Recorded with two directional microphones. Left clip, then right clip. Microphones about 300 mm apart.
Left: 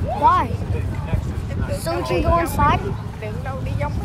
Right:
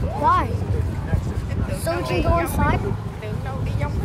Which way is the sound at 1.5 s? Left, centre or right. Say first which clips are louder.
Left 1 dB; left.